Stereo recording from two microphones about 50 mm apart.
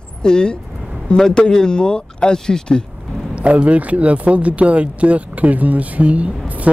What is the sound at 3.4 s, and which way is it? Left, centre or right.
Speech, right.